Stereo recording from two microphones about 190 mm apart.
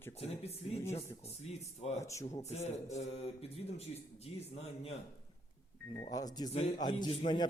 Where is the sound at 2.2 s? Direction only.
35° left (ahead or behind).